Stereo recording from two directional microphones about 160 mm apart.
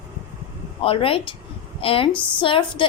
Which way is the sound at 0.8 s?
35° left (ahead or behind).